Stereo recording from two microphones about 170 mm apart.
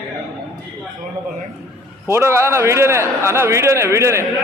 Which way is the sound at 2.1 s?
15° right (ahead or behind).